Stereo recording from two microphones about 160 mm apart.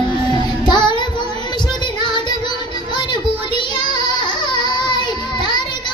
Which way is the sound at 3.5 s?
30° left (ahead or behind).